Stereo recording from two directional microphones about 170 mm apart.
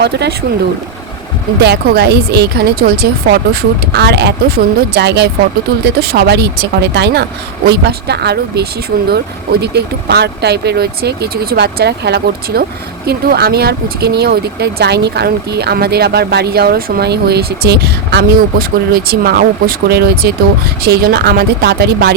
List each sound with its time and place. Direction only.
0.0 s speech: 80° right
1.6 s speech: 75° right (ahead or behind)
5.8 s speech: 65° right (ahead or behind)